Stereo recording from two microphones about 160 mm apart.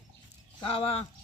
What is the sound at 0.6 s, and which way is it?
Speech, 35° left (ahead or behind).